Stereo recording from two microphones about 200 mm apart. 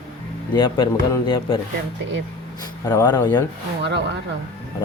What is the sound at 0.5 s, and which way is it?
Speech, 25° left (ahead or behind).